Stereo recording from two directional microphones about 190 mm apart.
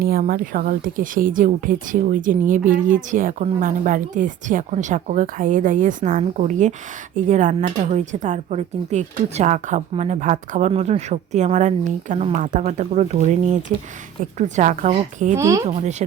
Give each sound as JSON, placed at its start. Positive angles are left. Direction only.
{"t": 0.0, "sound": "speech", "side_deg": -50}
{"t": 15.4, "sound": "speech", "side_deg": -15}
{"t": 15.6, "sound": "speech", "side_deg": -40}